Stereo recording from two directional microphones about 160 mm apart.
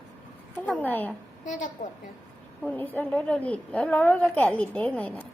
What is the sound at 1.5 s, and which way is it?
Speech, 50° left (ahead or behind).